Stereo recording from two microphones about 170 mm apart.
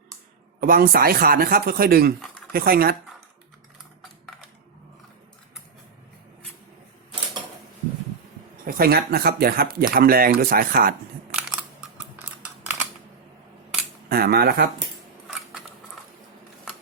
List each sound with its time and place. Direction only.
0.6 s speech: 60° right (ahead or behind)
8.6 s speech: 65° right (ahead or behind)
11.3 s camera: 5° right (ahead or behind)
12.2 s scissors: 10° right (ahead or behind)
14.1 s speech: 65° right (ahead or behind)